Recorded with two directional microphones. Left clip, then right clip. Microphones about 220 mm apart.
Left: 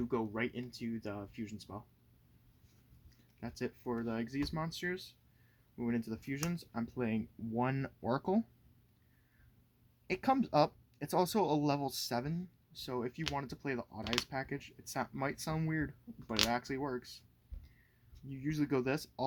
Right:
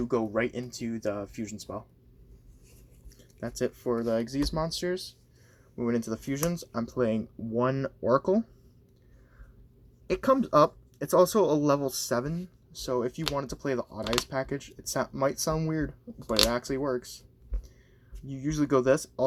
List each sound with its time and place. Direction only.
0.0 s speech: 5° left (ahead or behind)
3.4 s speech: 5° left (ahead or behind); by 8.4 s 20° left (ahead or behind)
10.1 s speech: 15° left (ahead or behind)
18.3 s speech: 5° left (ahead or behind)